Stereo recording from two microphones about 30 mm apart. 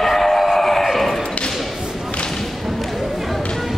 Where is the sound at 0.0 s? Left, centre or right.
Centre.